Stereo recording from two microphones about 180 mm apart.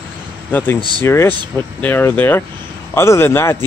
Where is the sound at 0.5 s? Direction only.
10° left (ahead or behind).